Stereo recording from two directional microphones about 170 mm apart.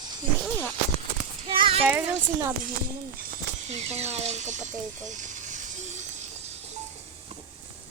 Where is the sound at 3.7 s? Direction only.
40° right (ahead or behind).